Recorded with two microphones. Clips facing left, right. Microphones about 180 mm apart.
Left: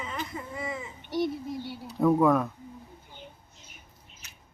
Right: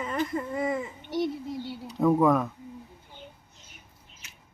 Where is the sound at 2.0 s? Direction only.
Centre (ahead or behind).